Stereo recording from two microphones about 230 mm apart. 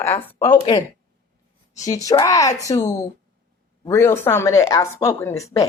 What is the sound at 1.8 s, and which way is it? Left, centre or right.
A woman's voice, centre.